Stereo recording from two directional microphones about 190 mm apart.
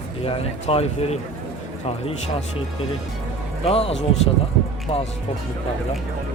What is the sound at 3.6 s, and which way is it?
Speech, 30° left (ahead or behind).